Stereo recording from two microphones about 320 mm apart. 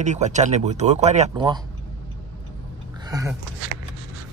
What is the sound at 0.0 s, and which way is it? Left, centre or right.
Speech, right.